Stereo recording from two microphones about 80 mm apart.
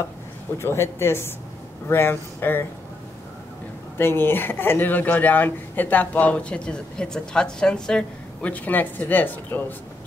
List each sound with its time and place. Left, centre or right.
0.6 s speech: left
4.0 s speech: left